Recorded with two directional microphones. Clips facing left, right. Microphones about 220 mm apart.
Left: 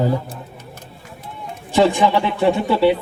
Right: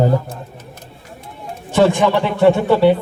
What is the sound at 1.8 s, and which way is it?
Speech, 50° right (ahead or behind).